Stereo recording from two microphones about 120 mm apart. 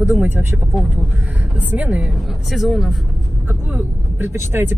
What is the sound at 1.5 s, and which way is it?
Speech, 10° right (ahead or behind).